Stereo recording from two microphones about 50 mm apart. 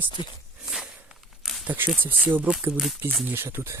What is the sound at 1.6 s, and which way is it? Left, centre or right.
Speech, right.